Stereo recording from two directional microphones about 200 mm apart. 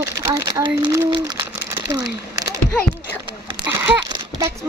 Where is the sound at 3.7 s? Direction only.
10° right (ahead or behind).